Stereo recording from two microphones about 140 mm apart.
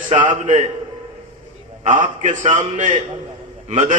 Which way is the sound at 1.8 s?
65° right (ahead or behind).